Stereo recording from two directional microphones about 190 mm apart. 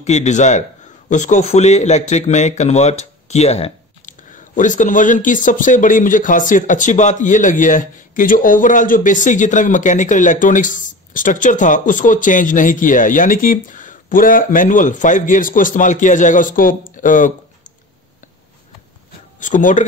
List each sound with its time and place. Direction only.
0.0 s a man's voice: 35° left (ahead or behind)
19.4 s a man's voice: 40° left (ahead or behind)